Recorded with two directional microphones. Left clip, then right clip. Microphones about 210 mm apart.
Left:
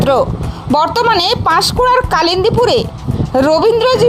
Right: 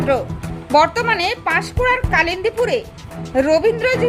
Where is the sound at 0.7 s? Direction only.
25° left (ahead or behind).